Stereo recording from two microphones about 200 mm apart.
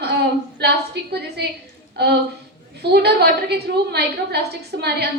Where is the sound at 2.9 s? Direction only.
55° right (ahead or behind).